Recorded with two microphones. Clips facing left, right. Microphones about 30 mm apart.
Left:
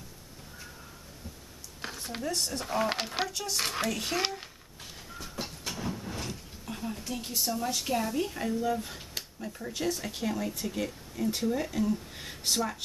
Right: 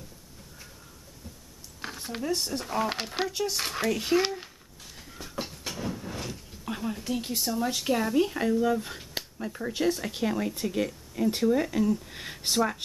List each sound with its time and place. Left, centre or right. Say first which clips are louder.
2.0 s speech: right 3 dB; centre
2.6 s speech: even; centre
3.3 s speech: right 6 dB; centre
3.5 s speech: right 2 dB; centre
4.2 s a sound: right 4 dB; centre
5.1 s train: right 3 dB; centre
6.7 s a sound: right 5 dB; right
7.1 s speech: right 2 dB; centre